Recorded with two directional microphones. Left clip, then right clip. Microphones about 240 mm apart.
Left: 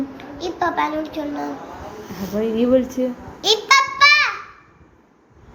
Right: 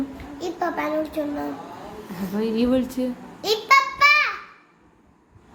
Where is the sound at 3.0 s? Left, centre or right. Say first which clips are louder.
Left 6 dB; centre.